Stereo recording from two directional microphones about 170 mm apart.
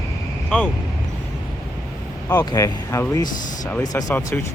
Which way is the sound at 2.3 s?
20° left (ahead or behind).